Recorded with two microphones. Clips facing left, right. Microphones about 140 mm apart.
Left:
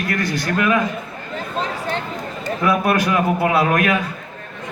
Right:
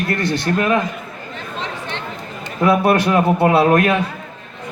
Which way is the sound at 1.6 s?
40° left (ahead or behind).